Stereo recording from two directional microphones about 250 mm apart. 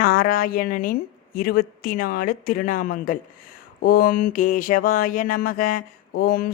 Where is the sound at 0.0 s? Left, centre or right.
Left.